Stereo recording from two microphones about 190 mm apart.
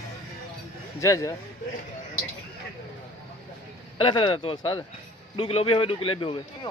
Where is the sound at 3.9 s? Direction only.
25° left (ahead or behind).